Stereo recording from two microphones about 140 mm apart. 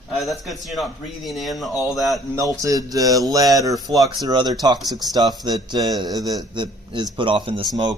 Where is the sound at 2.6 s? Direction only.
25° right (ahead or behind).